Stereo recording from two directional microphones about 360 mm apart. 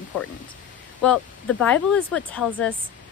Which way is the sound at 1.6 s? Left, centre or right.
Centre.